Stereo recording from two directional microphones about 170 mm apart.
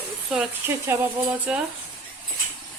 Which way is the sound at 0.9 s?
15° right (ahead or behind).